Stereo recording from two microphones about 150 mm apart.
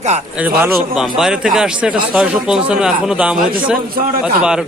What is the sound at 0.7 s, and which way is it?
A man's voice, 5° right (ahead or behind).